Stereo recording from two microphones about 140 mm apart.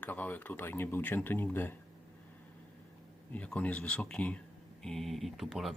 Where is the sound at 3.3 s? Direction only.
10° left (ahead or behind).